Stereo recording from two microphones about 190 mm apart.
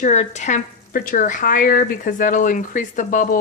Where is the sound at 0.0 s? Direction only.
40° left (ahead or behind).